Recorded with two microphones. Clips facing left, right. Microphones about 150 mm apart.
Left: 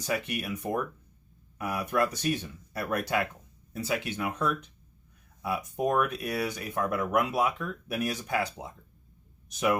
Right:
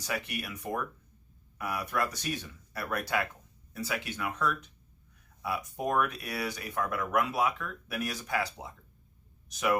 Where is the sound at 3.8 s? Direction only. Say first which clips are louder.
Left 4 dB; 25° left (ahead or behind).